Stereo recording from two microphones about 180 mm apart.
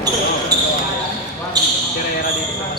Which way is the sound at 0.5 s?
20° right (ahead or behind).